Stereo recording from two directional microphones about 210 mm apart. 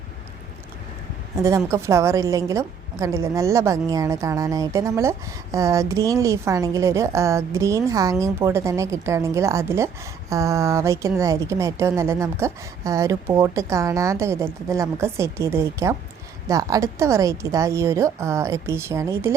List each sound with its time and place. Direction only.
1.4 s a woman's voice: 15° right (ahead or behind)